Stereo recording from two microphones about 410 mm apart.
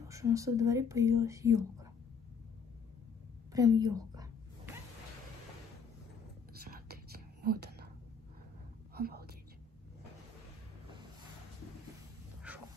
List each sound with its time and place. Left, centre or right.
0.1 s speech: centre
3.5 s a sound: centre
6.5 s whispering: right
8.9 s whispering: right
12.5 s dog: centre